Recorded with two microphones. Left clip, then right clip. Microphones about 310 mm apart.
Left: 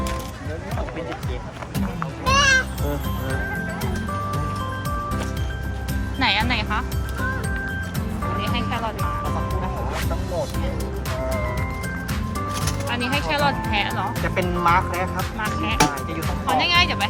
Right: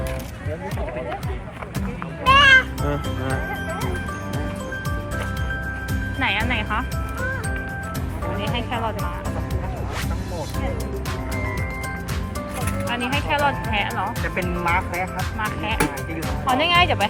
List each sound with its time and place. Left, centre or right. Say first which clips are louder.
2.3 s music: right 5 dB; centre
6.1 s speech: left 2 dB; centre
13.3 s speech: right 1 dB; centre